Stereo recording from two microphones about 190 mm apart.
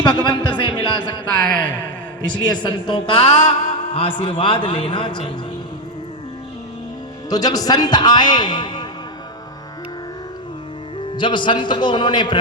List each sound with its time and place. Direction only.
0.0 s speech: 20° left (ahead or behind)
2.2 s speech: 25° left (ahead or behind)
7.3 s speech: 20° left (ahead or behind)
11.2 s speech: 25° left (ahead or behind)